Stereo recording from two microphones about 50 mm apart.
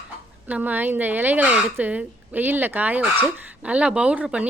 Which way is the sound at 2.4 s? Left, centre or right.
Right.